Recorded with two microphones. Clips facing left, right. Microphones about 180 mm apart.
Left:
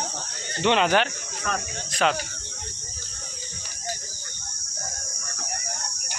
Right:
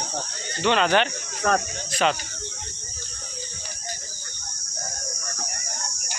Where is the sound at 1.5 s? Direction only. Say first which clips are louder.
Right 7 dB; 40° right (ahead or behind).